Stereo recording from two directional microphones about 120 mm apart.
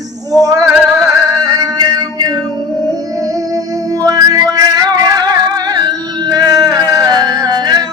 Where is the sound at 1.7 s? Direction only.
35° right (ahead or behind).